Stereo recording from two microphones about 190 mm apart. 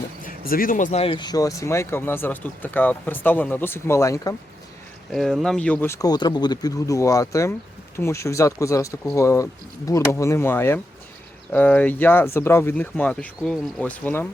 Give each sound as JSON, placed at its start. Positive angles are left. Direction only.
{"t": 0.2, "sound": "speech", "side_deg": 50}
{"t": 1.0, "sound": "speech", "side_deg": 25}
{"t": 5.1, "sound": "speech", "side_deg": 0}